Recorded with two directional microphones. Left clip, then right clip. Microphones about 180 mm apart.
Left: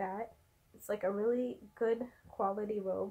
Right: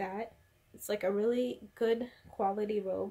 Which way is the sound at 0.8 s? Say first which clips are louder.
Right 2 dB; 15° right (ahead or behind).